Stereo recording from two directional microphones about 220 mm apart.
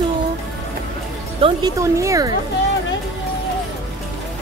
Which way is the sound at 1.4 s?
15° right (ahead or behind).